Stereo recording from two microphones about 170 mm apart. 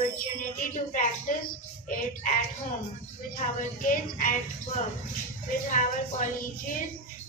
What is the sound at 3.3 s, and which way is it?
Music, 50° left (ahead or behind).